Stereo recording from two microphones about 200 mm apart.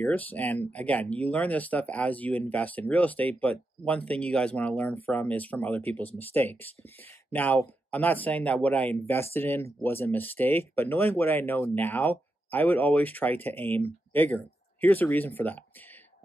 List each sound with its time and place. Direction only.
0.0 s speech: 10° left (ahead or behind)